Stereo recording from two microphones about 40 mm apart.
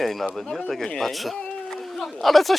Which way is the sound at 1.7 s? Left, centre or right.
Centre.